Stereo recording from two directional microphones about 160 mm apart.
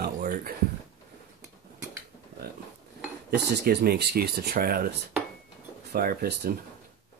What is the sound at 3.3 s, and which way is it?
Speech, 90° right.